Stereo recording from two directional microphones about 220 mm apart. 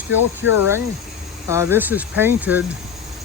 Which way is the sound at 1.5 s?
10° right (ahead or behind).